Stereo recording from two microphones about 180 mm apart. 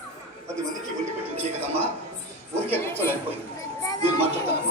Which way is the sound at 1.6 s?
10° right (ahead or behind).